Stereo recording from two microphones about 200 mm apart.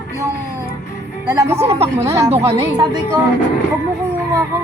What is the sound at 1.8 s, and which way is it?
A woman's voice, 15° right (ahead or behind).